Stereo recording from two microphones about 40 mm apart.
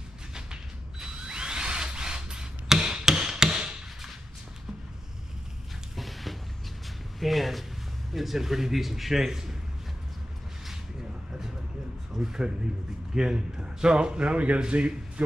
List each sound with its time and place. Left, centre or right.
0.3 s tools: centre
5.9 s music: centre
7.2 s a man's voice: centre
12.2 s a man's voice: centre